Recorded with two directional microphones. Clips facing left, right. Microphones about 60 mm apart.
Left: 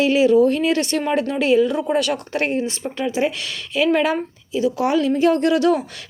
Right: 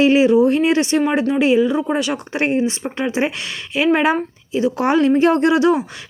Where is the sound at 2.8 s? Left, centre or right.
Right.